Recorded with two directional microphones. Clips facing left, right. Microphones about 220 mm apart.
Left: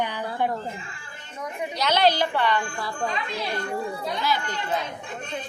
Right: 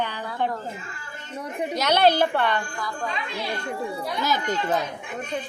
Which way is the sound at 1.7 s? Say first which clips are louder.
Right 2 dB; 50° right (ahead or behind).